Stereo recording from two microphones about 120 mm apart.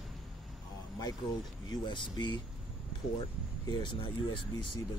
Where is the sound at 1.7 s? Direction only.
40° left (ahead or behind).